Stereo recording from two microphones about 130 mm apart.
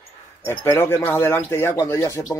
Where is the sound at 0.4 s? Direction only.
20° left (ahead or behind).